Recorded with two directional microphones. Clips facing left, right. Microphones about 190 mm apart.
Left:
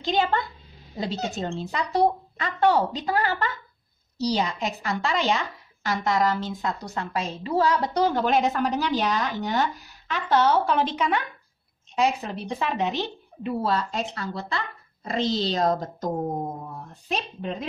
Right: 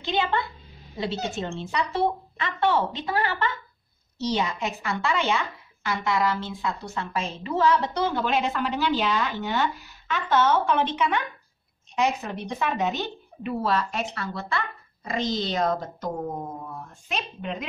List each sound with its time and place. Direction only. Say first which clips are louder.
0.0 s a woman's voice: left 2 dB; 40° left (ahead or behind)
15.2 s speech: left 3 dB; 45° right (ahead or behind)
15.5 s a woman's voice: left 2 dB; 35° left (ahead or behind)